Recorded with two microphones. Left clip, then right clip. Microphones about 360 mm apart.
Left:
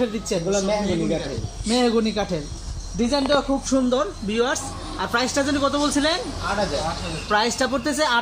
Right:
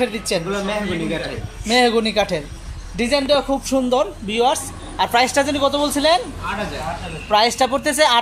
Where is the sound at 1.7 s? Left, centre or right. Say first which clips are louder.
Right 5 dB; centre.